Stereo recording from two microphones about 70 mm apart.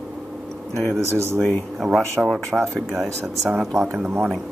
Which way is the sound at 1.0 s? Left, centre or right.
Right.